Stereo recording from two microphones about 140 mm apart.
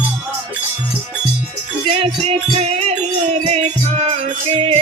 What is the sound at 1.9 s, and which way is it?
Music, 45° right (ahead or behind).